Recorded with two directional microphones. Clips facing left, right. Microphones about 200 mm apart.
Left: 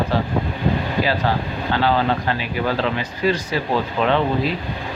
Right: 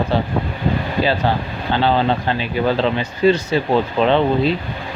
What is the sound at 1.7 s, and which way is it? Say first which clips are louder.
Speech: right 2 dB; 25° right (ahead or behind).